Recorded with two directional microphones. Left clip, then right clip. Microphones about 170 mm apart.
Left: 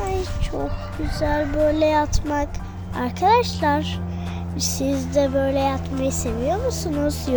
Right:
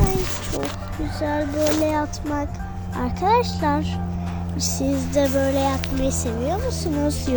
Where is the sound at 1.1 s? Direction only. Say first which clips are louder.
Left 2 dB; 25° left (ahead or behind).